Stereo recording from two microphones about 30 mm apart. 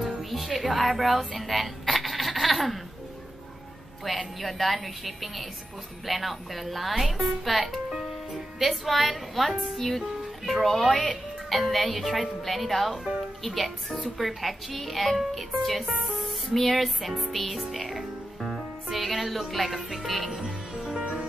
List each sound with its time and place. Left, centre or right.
0.2 s speech: centre
4.0 s speech: centre
16.0 s music: centre
17.4 s speech: centre
17.8 s music: centre
19.5 s speech: centre
21.0 s music: right